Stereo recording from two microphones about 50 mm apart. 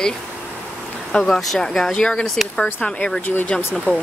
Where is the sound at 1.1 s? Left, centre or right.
Left.